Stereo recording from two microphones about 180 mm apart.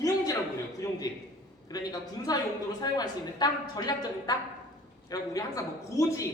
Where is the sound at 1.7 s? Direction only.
20° left (ahead or behind).